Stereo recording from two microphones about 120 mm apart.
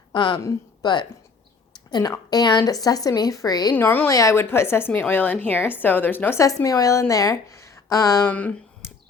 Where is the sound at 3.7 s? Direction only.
15° left (ahead or behind).